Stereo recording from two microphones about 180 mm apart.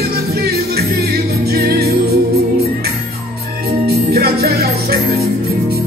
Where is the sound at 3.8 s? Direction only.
60° right (ahead or behind).